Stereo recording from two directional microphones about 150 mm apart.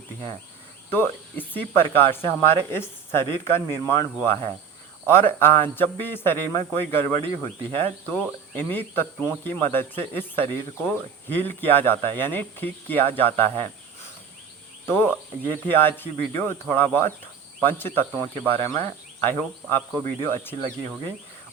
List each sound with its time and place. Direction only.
0.9 s speech: 15° left (ahead or behind)
14.8 s speech: 15° left (ahead or behind)